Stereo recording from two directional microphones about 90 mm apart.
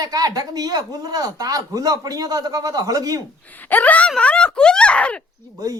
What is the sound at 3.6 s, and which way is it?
Speech, 20° left (ahead or behind).